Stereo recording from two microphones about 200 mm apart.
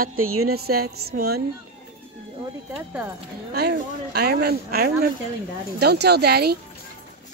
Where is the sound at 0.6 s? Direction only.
50° right (ahead or behind).